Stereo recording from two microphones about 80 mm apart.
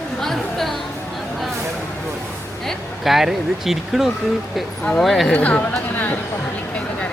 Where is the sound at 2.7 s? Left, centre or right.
Centre.